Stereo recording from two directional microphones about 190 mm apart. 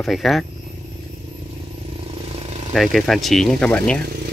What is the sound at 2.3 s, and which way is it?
Vehicle, 30° right (ahead or behind).